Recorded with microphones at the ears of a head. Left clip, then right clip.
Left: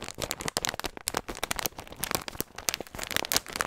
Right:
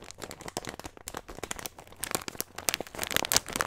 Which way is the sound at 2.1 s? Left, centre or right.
Centre.